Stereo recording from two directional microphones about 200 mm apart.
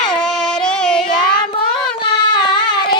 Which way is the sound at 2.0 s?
20° left (ahead or behind).